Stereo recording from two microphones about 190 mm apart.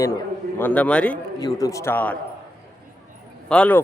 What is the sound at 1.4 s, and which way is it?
Speech, 20° left (ahead or behind).